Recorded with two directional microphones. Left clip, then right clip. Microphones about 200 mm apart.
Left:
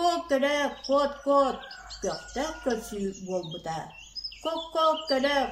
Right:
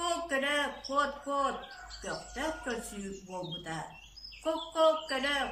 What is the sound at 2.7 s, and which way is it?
Speech, 30° left (ahead or behind).